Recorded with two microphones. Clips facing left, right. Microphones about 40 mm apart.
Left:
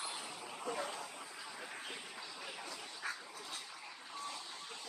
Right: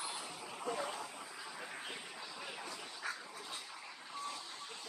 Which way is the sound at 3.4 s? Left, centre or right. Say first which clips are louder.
Right 1 dB; centre.